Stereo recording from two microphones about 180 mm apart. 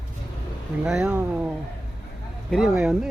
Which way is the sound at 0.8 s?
5° right (ahead or behind).